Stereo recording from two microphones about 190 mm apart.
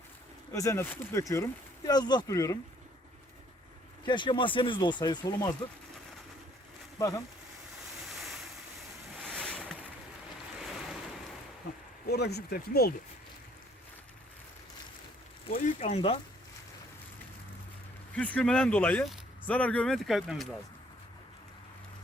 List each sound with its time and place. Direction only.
0.5 s speech: 15° left (ahead or behind)
4.0 s speech: 25° left (ahead or behind)
8.0 s waves: centre (ahead or behind)
9.2 s boat: 5° left (ahead or behind)
12.0 s speech: 60° left (ahead or behind)
15.4 s speech: 45° left (ahead or behind)
18.1 s speech: 5° left (ahead or behind)